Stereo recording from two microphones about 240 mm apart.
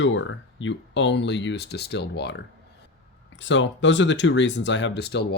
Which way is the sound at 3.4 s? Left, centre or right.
Left.